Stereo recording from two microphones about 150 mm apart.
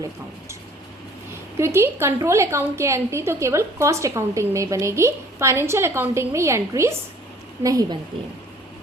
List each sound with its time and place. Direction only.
1.5 s a woman's voice: 20° right (ahead or behind)